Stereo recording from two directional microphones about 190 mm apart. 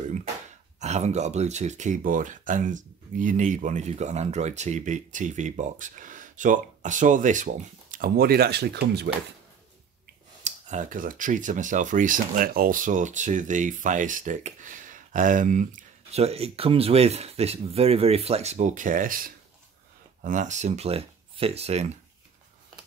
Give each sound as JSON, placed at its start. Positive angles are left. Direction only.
{"t": 0.0, "sound": "a sound", "side_deg": -40}
{"t": 0.7, "sound": "speech", "side_deg": -35}
{"t": 10.4, "sound": "speech", "side_deg": -40}